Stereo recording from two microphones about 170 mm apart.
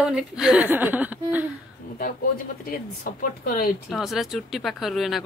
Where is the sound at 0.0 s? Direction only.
5° right (ahead or behind).